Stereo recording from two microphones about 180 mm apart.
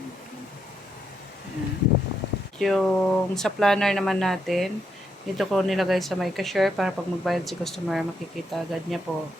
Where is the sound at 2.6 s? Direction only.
Centre (ahead or behind).